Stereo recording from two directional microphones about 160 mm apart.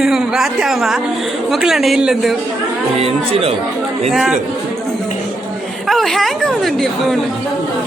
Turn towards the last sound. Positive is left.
turn(degrees=0)  # may be behind; listen again after turning